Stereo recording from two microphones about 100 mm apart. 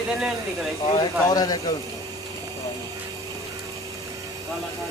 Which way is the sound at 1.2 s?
40° left (ahead or behind).